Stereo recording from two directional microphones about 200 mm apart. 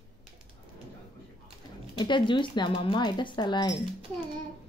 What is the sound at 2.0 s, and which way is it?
Speech, 25° left (ahead or behind).